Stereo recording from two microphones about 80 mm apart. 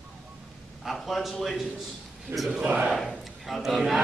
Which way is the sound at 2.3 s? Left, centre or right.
Right.